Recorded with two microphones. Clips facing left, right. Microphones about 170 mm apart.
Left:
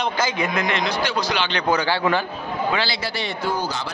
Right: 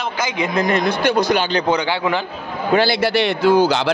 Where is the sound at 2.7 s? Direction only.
60° right (ahead or behind); by 3.9 s 85° right.